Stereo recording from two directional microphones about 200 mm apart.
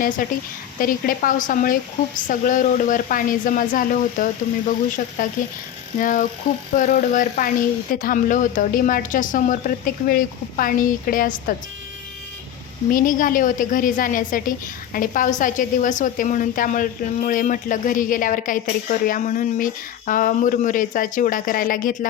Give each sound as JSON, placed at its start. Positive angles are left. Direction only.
{"t": 0.2, "sound": "a woman's voice", "side_deg": 45}
{"t": 12.9, "sound": "a woman's voice", "side_deg": 40}